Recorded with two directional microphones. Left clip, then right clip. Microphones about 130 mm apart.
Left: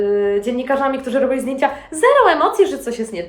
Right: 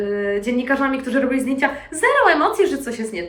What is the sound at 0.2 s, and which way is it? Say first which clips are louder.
A woman's voice: left 3 dB; 30° left (ahead or behind).